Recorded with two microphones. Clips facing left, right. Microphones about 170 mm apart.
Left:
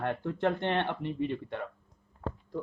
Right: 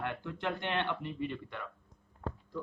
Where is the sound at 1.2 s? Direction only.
25° left (ahead or behind).